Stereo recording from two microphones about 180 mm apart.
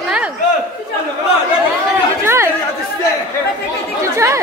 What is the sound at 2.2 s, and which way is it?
Chatter, 15° right (ahead or behind).